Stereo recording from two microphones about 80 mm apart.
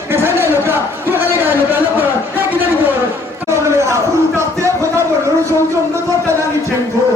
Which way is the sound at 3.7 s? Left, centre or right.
Right.